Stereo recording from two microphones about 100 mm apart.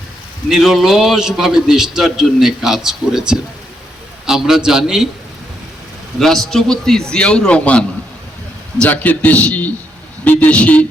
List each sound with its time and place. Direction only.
0.4 s a man's voice: 5° right (ahead or behind)
6.1 s a man's voice: 5° left (ahead or behind)